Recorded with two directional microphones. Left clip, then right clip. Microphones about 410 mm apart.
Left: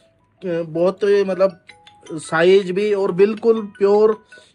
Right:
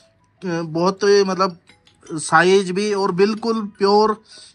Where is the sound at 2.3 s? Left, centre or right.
Centre.